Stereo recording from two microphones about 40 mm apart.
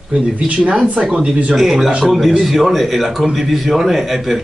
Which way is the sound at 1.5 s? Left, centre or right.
Centre.